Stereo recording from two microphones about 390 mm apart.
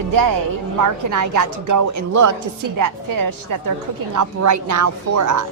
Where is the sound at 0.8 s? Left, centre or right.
Right.